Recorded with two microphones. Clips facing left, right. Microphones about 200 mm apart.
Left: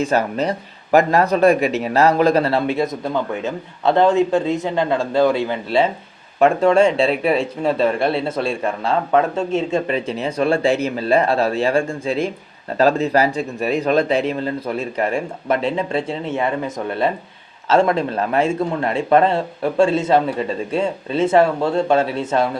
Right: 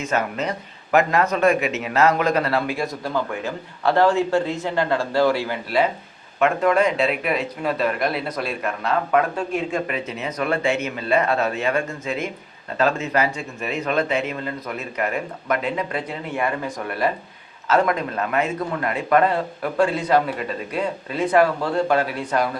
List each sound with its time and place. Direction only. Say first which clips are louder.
0.0 s a man's voice: left 5 dB; 35° left (ahead or behind)